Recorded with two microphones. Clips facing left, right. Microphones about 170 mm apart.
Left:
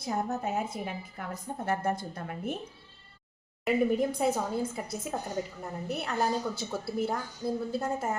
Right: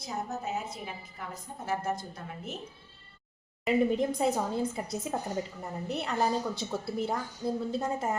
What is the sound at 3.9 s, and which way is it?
A woman's voice, centre (ahead or behind).